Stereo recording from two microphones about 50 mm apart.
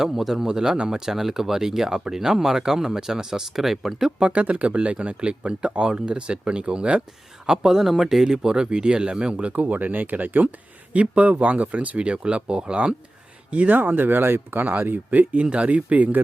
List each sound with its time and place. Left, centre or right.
0.0 s speech: centre
4.2 s speech: right
7.4 s speech: centre
13.5 s speech: right
14.6 s speech: right